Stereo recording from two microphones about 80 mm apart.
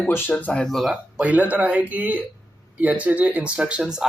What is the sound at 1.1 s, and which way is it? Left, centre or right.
Speech, centre.